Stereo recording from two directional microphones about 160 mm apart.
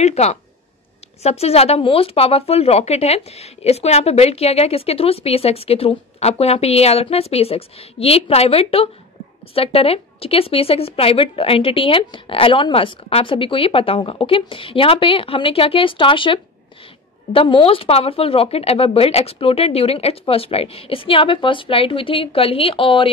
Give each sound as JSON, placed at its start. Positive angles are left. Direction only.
{"t": 0.0, "sound": "speech", "side_deg": 45}